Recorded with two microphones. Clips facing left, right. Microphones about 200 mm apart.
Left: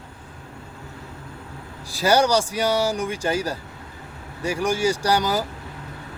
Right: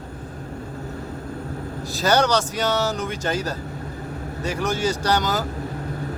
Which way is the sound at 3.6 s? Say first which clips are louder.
Right 8 dB; 40° right (ahead or behind).